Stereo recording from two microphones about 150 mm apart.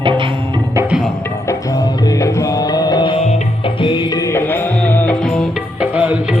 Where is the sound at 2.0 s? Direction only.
20° left (ahead or behind).